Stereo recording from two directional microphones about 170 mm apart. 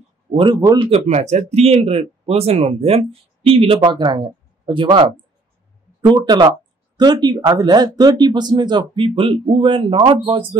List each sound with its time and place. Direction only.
0.4 s speech: 25° right (ahead or behind)
0.8 s speech: 40° right (ahead or behind)
5.9 s speech: 25° right (ahead or behind)